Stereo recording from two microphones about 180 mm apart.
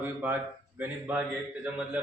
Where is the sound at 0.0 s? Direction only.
10° right (ahead or behind).